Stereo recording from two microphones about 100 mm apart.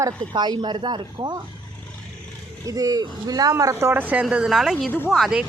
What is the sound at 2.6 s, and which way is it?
Speech, 40° right (ahead or behind).